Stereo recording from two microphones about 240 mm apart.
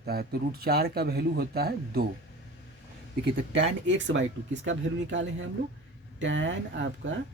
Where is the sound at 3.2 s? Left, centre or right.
Right.